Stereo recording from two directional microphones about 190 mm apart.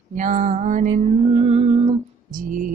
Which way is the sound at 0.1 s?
40° right (ahead or behind).